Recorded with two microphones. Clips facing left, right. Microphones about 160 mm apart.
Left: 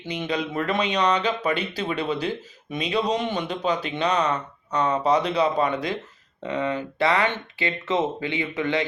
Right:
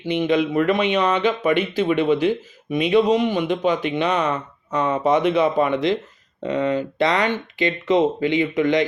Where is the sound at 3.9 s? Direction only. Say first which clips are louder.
Right 2 dB; 25° right (ahead or behind).